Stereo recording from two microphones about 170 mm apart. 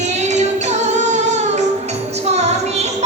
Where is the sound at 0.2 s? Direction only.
40° right (ahead or behind).